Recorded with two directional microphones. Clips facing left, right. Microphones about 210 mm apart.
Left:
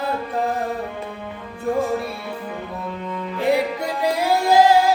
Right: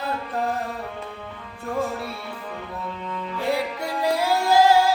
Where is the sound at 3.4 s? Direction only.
15° left (ahead or behind).